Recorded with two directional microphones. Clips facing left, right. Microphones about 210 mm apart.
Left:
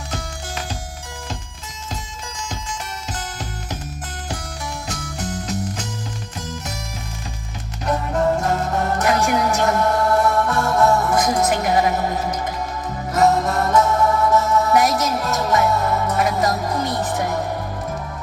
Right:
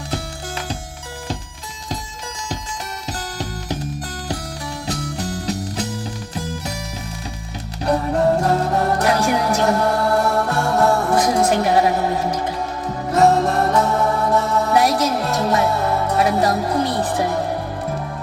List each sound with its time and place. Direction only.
3.1 s music: 35° right (ahead or behind)
4.9 s music: 35° right (ahead or behind)
7.9 s music: 35° right (ahead or behind)
13.1 s music: 30° right (ahead or behind)